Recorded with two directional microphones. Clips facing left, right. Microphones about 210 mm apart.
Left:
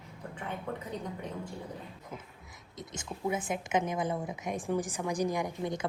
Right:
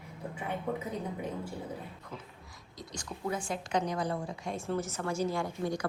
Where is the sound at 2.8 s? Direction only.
20° left (ahead or behind).